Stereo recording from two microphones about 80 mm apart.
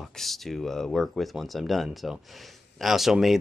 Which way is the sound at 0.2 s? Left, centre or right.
Centre.